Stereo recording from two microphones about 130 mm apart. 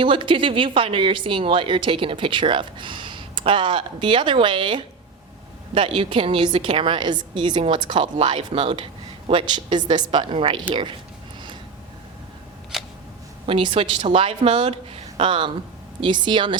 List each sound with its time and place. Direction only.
0.0 s speech: 40° right (ahead or behind)
12.7 s single-lens reflex camera: centre (ahead or behind)
13.4 s speech: 45° right (ahead or behind)